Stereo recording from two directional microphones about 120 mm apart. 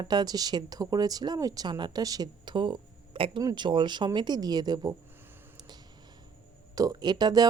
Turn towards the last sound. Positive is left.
turn(degrees=-35)  # may be behind; listen again after turning